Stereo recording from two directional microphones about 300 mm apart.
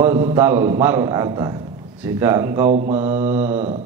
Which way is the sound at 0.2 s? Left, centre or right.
Centre.